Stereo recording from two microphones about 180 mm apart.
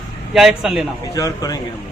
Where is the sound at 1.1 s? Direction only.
20° left (ahead or behind).